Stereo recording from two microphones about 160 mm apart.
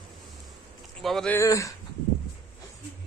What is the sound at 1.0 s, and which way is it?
Speech, 5° left (ahead or behind).